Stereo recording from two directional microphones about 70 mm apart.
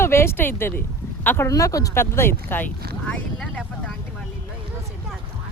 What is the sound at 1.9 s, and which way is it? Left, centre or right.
Speech, left.